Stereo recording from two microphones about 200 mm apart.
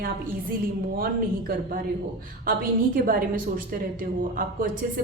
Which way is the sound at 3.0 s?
45° right (ahead or behind).